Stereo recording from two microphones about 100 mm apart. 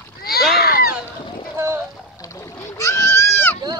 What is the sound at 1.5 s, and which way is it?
Boat, 25° right (ahead or behind).